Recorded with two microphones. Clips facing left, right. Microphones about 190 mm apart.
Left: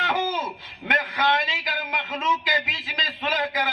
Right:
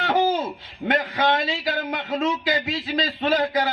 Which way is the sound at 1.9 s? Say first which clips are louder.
Right 2 dB; 35° right (ahead or behind).